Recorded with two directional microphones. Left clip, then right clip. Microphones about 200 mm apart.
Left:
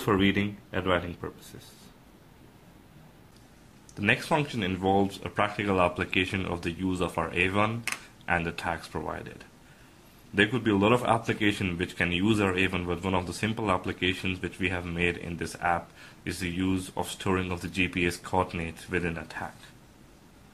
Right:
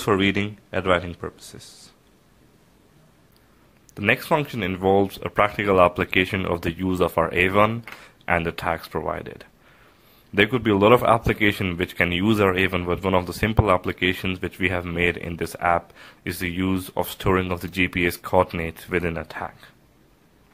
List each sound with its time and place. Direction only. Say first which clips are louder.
0.0 s speech: right 5 dB; 40° right (ahead or behind)
3.9 s speech: right 5 dB; 45° right (ahead or behind)